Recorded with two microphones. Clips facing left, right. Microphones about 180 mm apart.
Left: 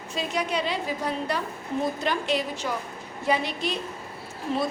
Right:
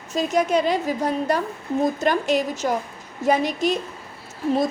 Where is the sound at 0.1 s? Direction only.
45° right (ahead or behind).